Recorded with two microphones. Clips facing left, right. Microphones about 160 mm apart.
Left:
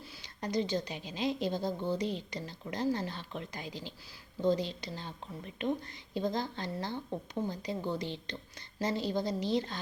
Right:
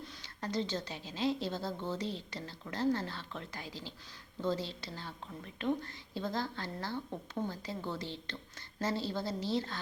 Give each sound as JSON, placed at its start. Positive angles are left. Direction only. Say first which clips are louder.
{"t": 0.0, "sound": "a woman's voice", "louder": "left 2 dB", "side_deg": 15}